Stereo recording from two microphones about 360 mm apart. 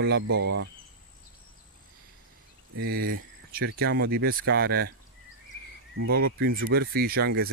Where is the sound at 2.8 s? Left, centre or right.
Right.